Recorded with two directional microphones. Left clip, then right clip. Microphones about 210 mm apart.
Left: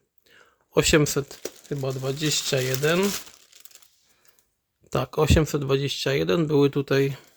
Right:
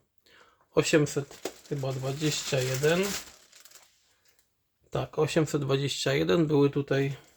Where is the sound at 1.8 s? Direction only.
50° left (ahead or behind).